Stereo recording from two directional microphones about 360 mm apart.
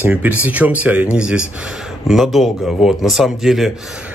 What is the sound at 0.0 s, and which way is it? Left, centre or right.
Speech, centre.